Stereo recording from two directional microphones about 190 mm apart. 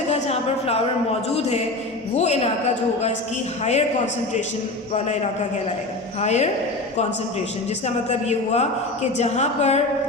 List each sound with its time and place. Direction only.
0.1 s a sound: 35° left (ahead or behind)
2.1 s a man's voice: 35° left (ahead or behind)
3.6 s a man's voice: 35° left (ahead or behind)
6.1 s a man's voice: 35° left (ahead or behind)
7.9 s a man's voice: 35° left (ahead or behind)